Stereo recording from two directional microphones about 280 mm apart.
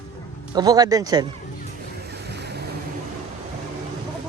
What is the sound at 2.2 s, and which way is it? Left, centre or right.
Waves, right.